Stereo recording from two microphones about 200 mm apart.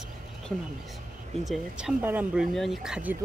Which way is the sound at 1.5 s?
5° right (ahead or behind).